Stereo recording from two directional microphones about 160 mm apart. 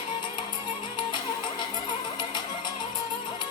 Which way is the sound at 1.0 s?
30° left (ahead or behind).